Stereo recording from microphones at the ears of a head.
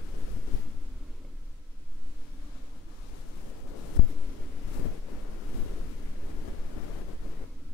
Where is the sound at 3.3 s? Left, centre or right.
Left.